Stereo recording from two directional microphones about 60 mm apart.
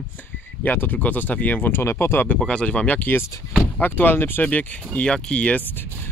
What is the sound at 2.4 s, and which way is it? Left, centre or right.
Speech, centre.